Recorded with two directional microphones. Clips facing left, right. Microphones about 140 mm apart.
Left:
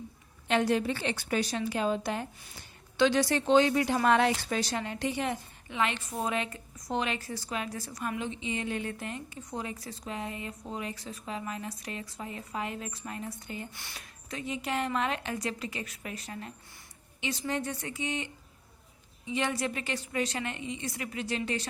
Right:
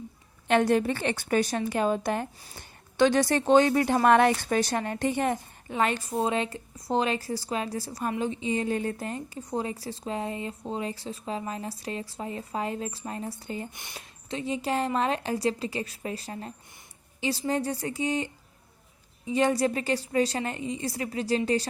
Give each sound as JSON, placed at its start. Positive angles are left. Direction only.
{"t": 0.4, "sound": "a woman's voice", "side_deg": -55}
{"t": 13.7, "sound": "speech", "side_deg": -20}